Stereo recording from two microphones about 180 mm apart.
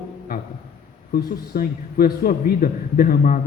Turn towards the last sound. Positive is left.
turn(degrees=50)  # may be behind; listen again after turning